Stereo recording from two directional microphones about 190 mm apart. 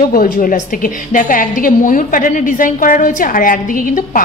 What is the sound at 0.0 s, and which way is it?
A woman's voice, 45° left (ahead or behind).